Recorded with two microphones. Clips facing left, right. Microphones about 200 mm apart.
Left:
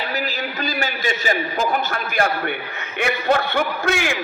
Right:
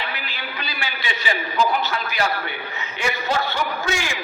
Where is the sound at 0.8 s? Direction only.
45° left (ahead or behind).